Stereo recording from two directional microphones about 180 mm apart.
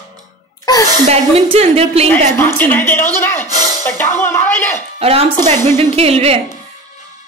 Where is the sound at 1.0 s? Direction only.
35° right (ahead or behind).